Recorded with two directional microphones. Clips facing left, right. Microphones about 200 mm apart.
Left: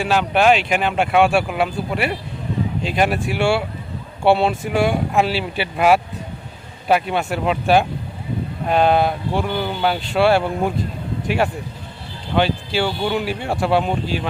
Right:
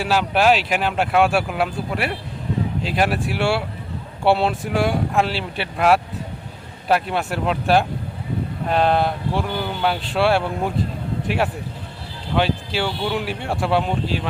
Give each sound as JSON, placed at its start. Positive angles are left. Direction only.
{"t": 0.0, "sound": "speech", "side_deg": -5}
{"t": 12.3, "sound": "speech", "side_deg": 0}